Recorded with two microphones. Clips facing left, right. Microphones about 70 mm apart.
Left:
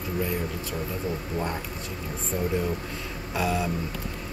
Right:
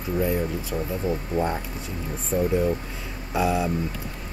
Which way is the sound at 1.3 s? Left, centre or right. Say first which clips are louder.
Right 6 dB; right.